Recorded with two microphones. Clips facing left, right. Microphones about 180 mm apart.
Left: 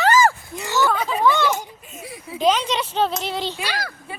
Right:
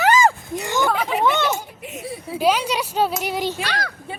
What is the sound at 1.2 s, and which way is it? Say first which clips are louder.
Speech: left 2 dB; 20° right (ahead or behind).